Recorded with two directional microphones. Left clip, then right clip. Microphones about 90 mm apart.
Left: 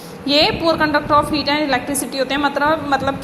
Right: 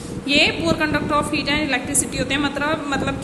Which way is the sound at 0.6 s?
20° left (ahead or behind).